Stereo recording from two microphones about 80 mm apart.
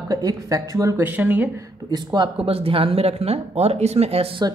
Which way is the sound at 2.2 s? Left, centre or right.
Right.